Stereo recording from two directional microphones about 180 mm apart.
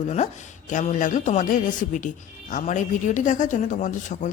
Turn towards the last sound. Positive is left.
turn(degrees=40)  # may be behind; listen again after turning